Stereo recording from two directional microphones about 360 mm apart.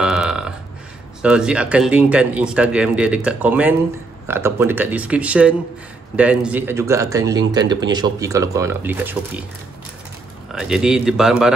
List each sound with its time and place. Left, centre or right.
0.0 s burping: centre
1.2 s a man's voice: centre
10.5 s a man's voice: centre